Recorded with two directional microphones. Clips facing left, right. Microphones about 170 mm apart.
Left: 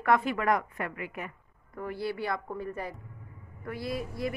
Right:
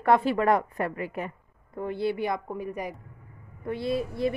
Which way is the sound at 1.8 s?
20° right (ahead or behind).